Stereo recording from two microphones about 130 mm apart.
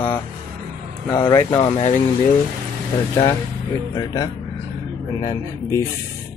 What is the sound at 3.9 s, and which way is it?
Speech, 30° left (ahead or behind).